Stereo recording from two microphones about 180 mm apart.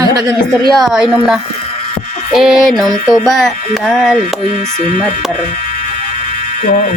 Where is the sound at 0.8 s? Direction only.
5° right (ahead or behind).